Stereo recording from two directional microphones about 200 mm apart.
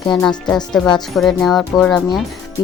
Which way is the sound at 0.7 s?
5° left (ahead or behind).